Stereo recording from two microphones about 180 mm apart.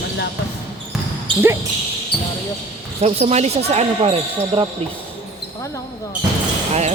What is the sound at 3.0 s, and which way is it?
Speech, 35° right (ahead or behind).